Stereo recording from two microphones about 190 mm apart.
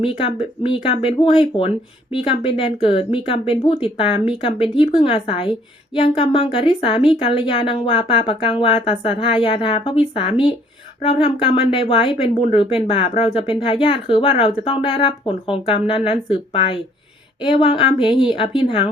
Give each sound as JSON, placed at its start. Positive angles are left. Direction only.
{"t": 0.0, "sound": "a woman's voice", "side_deg": 30}